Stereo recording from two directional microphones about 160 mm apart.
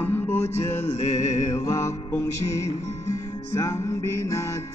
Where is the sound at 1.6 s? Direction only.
20° left (ahead or behind).